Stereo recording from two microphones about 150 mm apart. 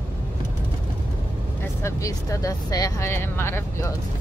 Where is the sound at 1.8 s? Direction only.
20° left (ahead or behind).